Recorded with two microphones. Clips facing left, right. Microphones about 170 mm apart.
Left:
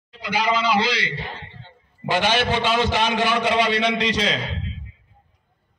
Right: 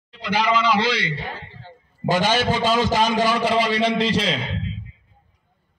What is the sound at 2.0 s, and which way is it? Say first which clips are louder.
A man's voice: right 1 dB; 40° right (ahead or behind).